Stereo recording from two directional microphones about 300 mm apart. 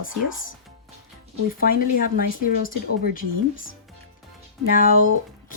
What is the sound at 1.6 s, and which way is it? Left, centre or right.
Speech, left.